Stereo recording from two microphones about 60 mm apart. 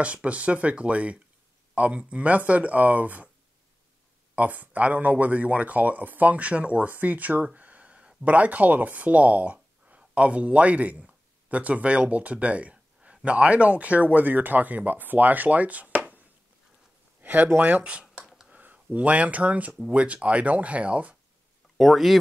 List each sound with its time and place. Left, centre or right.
0.0 s speech: right
4.4 s speech: right
17.2 s a sound: right
17.6 s speech: right
21.7 s speech: centre